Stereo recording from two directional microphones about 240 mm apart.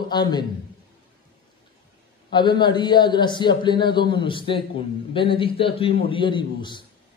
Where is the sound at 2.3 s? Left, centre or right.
Centre.